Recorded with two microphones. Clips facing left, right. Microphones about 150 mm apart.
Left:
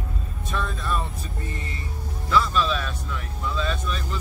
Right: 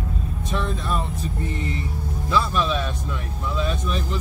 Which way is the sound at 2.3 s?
20° right (ahead or behind).